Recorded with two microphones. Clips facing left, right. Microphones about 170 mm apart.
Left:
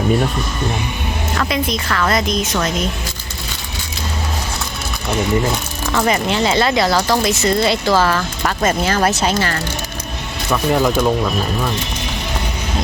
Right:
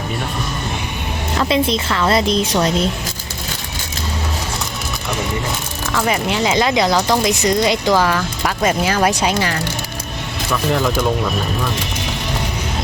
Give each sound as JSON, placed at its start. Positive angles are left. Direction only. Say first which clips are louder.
{"t": 1.4, "sound": "a woman's voice", "louder": "right 4 dB", "side_deg": -25}
{"t": 6.1, "sound": "speech", "louder": "left 1 dB", "side_deg": -10}
{"t": 10.5, "sound": "speech", "louder": "left 3 dB", "side_deg": 10}